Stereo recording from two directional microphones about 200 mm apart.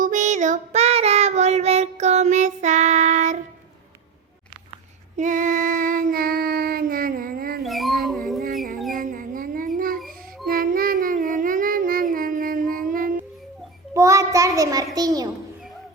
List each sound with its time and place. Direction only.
0.0 s child singing: 40° right (ahead or behind)
5.1 s child singing: 40° right (ahead or behind)
7.6 s dog: centre (ahead or behind)
8.9 s a sound: 45° right (ahead or behind)
10.4 s child singing: 45° right (ahead or behind)
13.9 s child singing: 15° right (ahead or behind)
14.9 s a child's voice: 20° right (ahead or behind)